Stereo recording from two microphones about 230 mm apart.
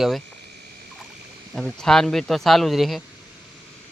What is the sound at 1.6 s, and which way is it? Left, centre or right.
Speech, centre.